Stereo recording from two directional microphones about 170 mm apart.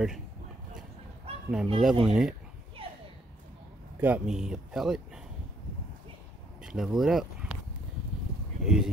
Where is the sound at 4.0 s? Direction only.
10° right (ahead or behind).